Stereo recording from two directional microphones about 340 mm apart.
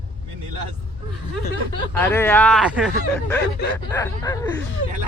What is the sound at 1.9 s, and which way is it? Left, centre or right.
Speech, centre.